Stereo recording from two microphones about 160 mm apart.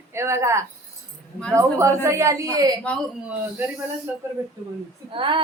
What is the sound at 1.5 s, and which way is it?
A woman's voice, 20° right (ahead or behind).